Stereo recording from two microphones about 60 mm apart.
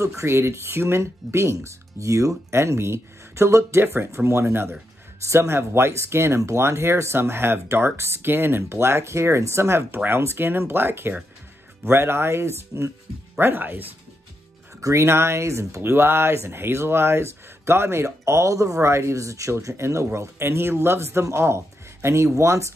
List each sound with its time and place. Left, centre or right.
0.0 s speech: right
2.5 s speech: right
5.2 s speech: right
13.4 s speech: right
14.8 s speech: right
15.8 s speech: right